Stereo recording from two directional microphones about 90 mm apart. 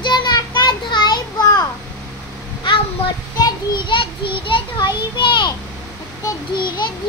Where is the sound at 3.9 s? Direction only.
70° left (ahead or behind).